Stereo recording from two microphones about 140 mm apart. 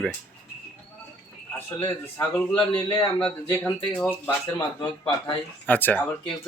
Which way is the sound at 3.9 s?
10° left (ahead or behind).